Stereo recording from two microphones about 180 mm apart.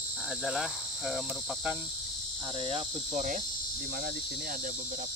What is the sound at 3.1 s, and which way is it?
Cricket, 45° right (ahead or behind).